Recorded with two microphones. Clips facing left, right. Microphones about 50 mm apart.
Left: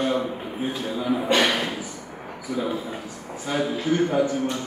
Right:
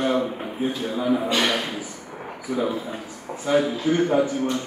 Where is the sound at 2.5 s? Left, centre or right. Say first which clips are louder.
Right 3 dB; right.